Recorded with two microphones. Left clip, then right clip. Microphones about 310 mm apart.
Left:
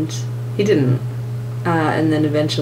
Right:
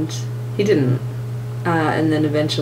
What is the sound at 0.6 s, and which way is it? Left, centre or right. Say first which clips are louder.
Speech: left 1 dB; centre.